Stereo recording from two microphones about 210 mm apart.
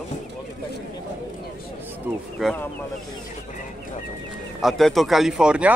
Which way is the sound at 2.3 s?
5° left (ahead or behind).